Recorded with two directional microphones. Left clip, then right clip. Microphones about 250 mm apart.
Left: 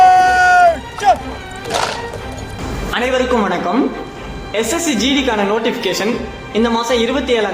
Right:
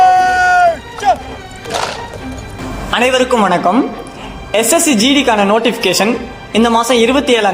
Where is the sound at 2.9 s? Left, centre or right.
Right.